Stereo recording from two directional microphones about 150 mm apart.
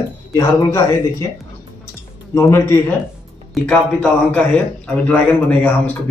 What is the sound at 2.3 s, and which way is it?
Speech, 20° left (ahead or behind).